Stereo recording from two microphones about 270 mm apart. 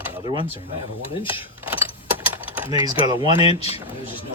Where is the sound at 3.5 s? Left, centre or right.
Left.